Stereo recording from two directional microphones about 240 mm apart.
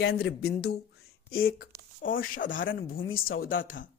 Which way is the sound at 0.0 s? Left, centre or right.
Left.